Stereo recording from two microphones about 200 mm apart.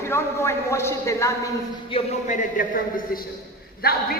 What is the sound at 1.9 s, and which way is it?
Speech, 35° left (ahead or behind).